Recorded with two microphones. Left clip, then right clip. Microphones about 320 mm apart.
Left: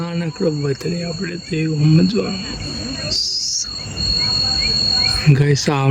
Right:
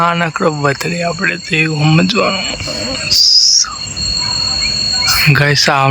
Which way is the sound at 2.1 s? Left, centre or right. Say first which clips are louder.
Right 8 dB; centre.